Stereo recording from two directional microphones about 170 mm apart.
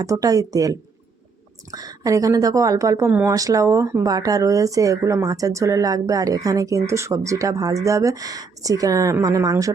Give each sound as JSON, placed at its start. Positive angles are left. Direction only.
{"t": 0.0, "sound": "a woman's voice", "side_deg": -20}